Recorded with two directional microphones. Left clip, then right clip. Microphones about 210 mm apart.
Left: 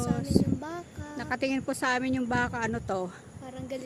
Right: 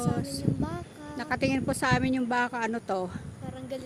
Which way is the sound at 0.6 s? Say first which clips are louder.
Right 2 dB; 25° left (ahead or behind).